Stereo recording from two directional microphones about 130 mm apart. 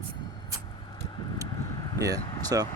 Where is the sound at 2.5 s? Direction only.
25° right (ahead or behind).